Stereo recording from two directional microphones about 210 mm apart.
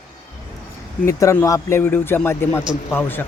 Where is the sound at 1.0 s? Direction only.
15° left (ahead or behind).